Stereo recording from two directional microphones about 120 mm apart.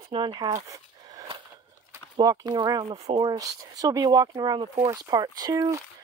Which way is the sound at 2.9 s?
55° right (ahead or behind).